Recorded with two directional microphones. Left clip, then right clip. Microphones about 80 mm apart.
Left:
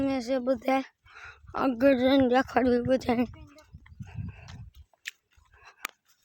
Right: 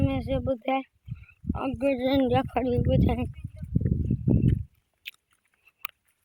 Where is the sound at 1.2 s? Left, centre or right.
Left.